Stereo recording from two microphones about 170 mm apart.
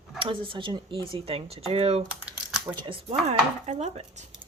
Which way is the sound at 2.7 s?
30° right (ahead or behind).